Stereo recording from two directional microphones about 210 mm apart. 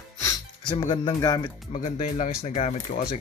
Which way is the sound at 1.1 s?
15° left (ahead or behind).